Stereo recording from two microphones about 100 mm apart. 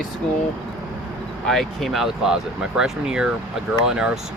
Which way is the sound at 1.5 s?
Centre (ahead or behind).